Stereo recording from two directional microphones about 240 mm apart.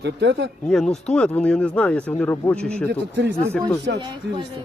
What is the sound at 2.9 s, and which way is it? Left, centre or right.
Speech, right.